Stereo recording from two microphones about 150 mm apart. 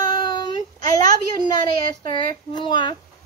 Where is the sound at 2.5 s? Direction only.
30° left (ahead or behind).